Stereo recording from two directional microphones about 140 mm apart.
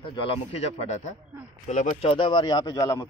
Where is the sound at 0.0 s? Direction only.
35° left (ahead or behind).